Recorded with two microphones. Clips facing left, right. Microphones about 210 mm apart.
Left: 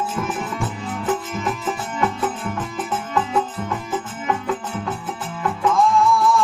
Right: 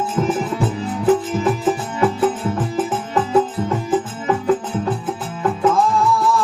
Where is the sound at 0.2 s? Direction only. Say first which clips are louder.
Right 10 dB; 35° right (ahead or behind).